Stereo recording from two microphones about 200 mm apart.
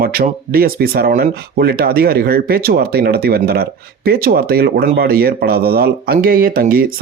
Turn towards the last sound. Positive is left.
turn(degrees=-45)  # may be behind; listen again after turning